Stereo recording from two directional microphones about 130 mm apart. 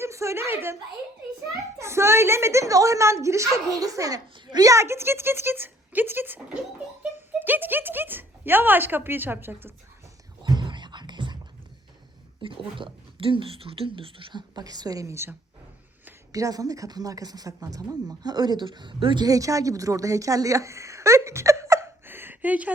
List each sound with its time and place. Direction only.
0.0 s speech: 20° right (ahead or behind)
1.8 s a woman's voice: 20° right (ahead or behind)
10.4 s whispering: 35° right (ahead or behind)
12.4 s speech: 40° right (ahead or behind)
19.2 s a woman's voice: 25° right (ahead or behind); by 22.7 s 10° right (ahead or behind)